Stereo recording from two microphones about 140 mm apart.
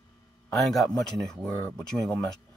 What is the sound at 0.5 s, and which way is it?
Speech, centre (ahead or behind).